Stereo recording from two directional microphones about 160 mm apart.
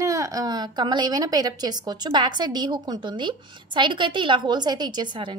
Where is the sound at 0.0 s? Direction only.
20° right (ahead or behind).